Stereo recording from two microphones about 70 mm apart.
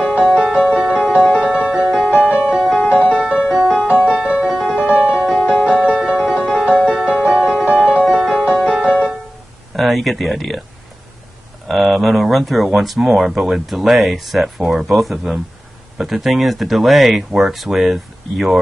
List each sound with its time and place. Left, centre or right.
0.2 s music: centre
2.0 s music: left
2.5 s music: centre
3.1 s music: centre
3.4 s music: centre
4.6 s music: centre
9.8 s speech: centre
11.6 s speech: centre